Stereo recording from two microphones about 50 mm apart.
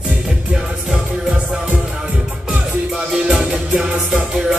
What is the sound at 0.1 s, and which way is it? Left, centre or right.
Music, centre.